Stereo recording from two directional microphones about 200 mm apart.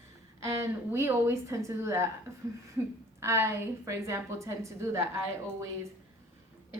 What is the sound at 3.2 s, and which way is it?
A woman's voice, 15° right (ahead or behind).